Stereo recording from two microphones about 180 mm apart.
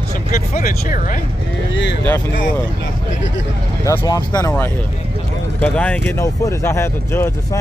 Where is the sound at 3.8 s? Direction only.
20° left (ahead or behind).